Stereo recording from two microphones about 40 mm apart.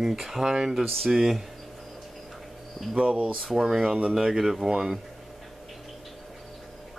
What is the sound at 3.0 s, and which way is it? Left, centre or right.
Speech, right.